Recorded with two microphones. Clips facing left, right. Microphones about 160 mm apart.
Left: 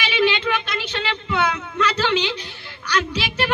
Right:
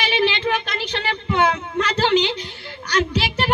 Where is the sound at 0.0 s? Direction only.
45° right (ahead or behind).